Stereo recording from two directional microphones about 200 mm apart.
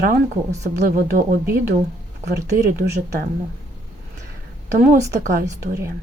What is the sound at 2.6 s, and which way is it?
Speech, 50° right (ahead or behind).